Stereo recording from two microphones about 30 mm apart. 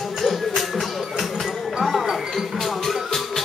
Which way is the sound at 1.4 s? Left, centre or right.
Centre.